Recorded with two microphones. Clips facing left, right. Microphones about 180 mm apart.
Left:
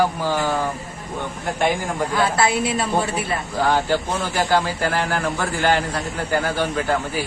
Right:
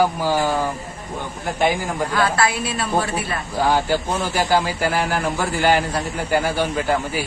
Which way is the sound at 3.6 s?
10° right (ahead or behind).